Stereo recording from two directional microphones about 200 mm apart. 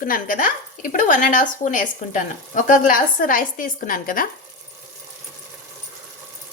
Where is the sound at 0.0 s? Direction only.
45° left (ahead or behind).